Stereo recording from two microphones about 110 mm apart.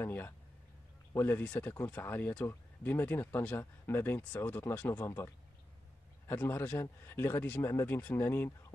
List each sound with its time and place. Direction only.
0.0 s speech: 20° left (ahead or behind)